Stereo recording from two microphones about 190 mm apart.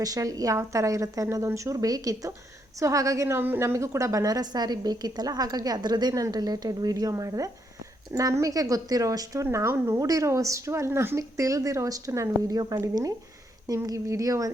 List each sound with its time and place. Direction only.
0.0 s a woman's voice: 20° right (ahead or behind)